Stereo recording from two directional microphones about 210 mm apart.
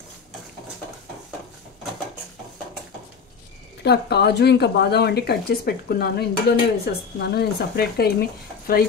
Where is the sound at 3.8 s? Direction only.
50° left (ahead or behind).